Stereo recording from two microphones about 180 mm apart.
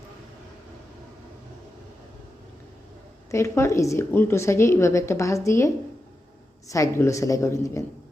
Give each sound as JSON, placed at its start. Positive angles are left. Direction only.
{"t": 3.3, "sound": "a woman's voice", "side_deg": 15}